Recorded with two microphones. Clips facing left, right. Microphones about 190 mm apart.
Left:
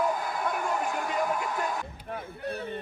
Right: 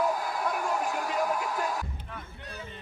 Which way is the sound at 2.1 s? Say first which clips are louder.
Left 9 dB; 60° left (ahead or behind).